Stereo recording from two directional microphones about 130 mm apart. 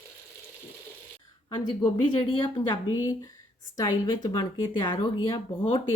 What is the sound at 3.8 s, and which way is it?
Speech, 35° left (ahead or behind).